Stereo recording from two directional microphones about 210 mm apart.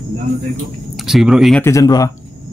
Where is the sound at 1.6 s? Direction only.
15° left (ahead or behind).